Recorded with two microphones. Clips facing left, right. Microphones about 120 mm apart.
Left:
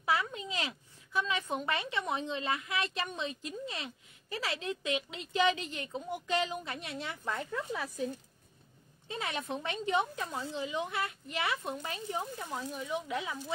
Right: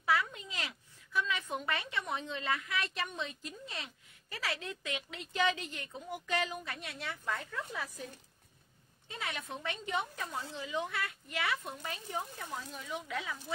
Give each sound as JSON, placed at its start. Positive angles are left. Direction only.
{"t": 0.0, "sound": "a woman's voice", "side_deg": 25}
{"t": 9.1, "sound": "a woman's voice", "side_deg": 30}